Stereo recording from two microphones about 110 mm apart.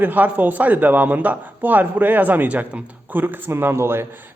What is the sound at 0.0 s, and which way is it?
A man's voice, 15° right (ahead or behind).